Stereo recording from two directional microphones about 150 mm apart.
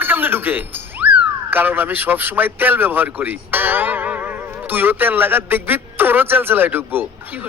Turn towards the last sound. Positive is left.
turn(degrees=-15)  # may be behind; listen again after turning